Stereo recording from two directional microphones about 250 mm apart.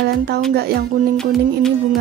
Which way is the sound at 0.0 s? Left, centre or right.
Right.